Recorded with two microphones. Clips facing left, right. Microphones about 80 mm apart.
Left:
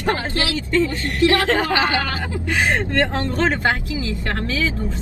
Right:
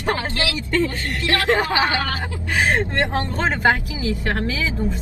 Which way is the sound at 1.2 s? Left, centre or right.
Left.